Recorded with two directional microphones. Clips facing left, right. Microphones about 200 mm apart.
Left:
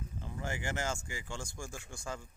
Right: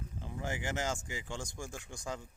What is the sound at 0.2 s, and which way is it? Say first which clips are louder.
Speech: right 1 dB; 15° right (ahead or behind).